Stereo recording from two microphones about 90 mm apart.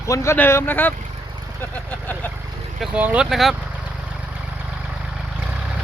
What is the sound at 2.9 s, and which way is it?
Speech, 15° right (ahead or behind).